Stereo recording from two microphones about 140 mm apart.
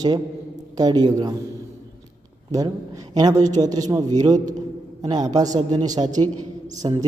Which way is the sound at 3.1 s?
25° right (ahead or behind).